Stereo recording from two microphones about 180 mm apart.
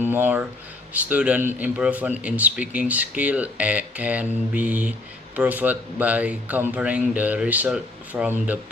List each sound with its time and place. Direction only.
0.0 s a man's voice: 10° right (ahead or behind)